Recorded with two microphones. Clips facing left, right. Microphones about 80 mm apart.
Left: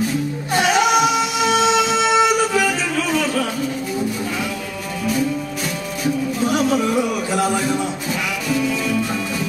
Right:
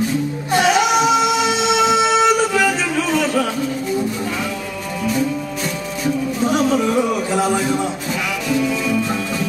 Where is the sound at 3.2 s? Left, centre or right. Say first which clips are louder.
Right 2 dB; centre.